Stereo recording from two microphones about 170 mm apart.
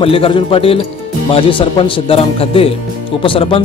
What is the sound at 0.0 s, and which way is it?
A man's voice, 35° left (ahead or behind).